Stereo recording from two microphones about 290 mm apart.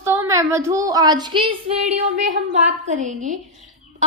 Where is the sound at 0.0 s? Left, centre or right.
Centre.